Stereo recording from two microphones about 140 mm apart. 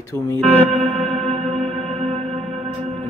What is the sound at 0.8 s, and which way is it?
Music, 40° right (ahead or behind).